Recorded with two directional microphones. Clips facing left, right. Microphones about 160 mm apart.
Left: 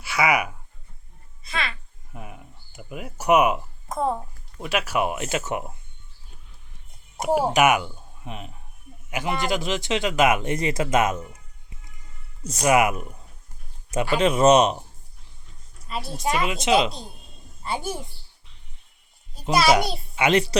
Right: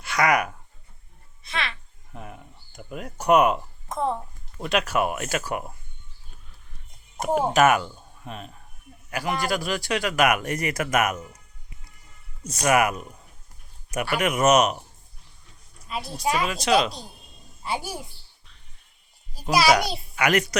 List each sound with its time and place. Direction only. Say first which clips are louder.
0.0 s speech: even; 5° left (ahead or behind)
1.5 s a sound: left 1 dB; centre (ahead or behind)
4.6 s speech: right 1 dB; 5° left (ahead or behind)
7.2 s a man's voice: even; 10° left (ahead or behind); by 11.3 s 25° left (ahead or behind)
12.5 s speech: left 2 dB; 20° left (ahead or behind)
15.9 s a child's voice: even; centre (ahead or behind)
16.4 s speech: left 2 dB; 20° left (ahead or behind)
17.6 s a child's voice: left 1 dB; 5° right (ahead or behind)
19.3 s a sound: even; centre (ahead or behind)
19.8 s a child's voice: left 2 dB; centre (ahead or behind)
20.1 s speech: left 2 dB; 25° left (ahead or behind)